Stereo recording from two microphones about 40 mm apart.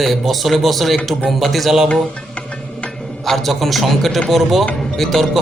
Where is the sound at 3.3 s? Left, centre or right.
Centre.